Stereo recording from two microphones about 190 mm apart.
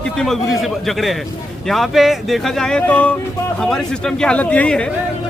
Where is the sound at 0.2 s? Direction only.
Centre (ahead or behind).